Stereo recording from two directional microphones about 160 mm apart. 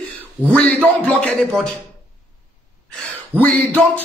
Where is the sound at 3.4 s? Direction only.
10° left (ahead or behind).